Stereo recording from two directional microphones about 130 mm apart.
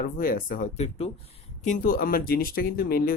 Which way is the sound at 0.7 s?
55° left (ahead or behind).